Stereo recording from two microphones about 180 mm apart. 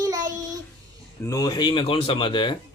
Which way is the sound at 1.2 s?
20° left (ahead or behind).